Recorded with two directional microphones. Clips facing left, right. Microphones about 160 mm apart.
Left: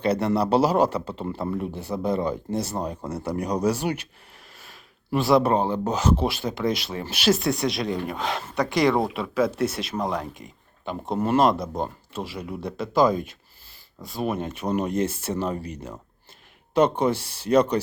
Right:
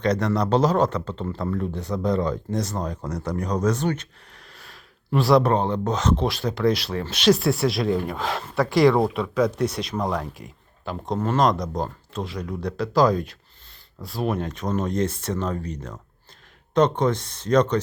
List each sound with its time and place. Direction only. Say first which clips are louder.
0.0 s speech: even; 10° left (ahead or behind)
8.2 s speech: right 2 dB; 20° left (ahead or behind)
8.7 s speech: right 4 dB; centre (ahead or behind)
9.4 s speech: right 1 dB; 25° left (ahead or behind)
10.3 s speech: right 2 dB; centre (ahead or behind)